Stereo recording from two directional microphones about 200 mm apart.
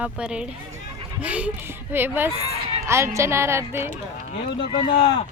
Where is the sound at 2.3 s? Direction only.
30° right (ahead or behind).